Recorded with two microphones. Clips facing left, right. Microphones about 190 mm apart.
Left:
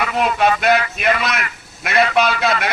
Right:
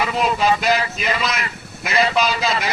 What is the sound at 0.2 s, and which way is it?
Speech, 60° left (ahead or behind).